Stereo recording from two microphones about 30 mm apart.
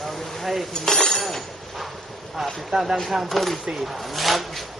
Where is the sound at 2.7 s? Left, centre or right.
Right.